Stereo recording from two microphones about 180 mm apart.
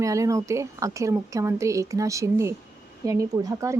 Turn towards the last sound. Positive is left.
turn(degrees=-15)  # may be behind; listen again after turning